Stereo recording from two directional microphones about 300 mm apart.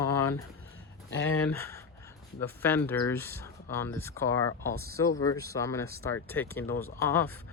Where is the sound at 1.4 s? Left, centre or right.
Centre.